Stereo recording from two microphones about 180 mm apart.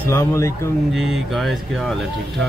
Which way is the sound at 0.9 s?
Centre (ahead or behind).